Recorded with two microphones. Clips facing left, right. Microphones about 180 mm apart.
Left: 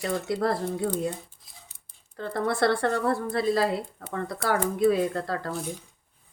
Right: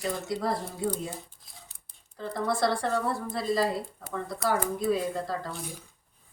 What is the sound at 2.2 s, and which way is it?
A woman's voice, 60° left (ahead or behind).